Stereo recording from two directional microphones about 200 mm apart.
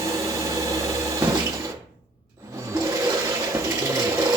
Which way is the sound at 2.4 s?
15° right (ahead or behind).